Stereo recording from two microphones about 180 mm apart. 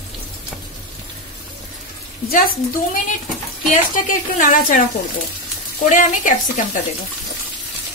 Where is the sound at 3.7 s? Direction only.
45° left (ahead or behind).